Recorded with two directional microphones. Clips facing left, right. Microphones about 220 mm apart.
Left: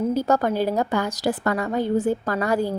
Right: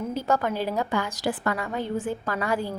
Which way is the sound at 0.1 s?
40° left (ahead or behind).